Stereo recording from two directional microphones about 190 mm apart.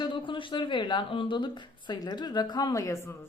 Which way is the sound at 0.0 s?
25° left (ahead or behind).